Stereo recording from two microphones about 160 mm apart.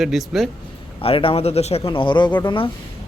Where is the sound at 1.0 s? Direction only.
35° left (ahead or behind).